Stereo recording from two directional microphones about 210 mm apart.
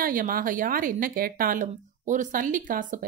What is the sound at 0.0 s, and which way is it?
A woman's voice, 40° right (ahead or behind).